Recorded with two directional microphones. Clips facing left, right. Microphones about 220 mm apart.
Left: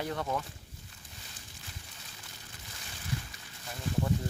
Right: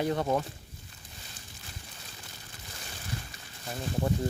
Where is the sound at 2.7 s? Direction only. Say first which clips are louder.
Left 1 dB; 40° right (ahead or behind).